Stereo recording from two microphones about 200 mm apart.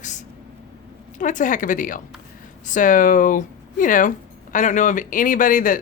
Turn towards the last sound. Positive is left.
turn(degrees=40)  # may be behind; listen again after turning